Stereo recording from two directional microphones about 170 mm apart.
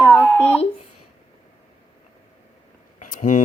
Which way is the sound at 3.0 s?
50° left (ahead or behind).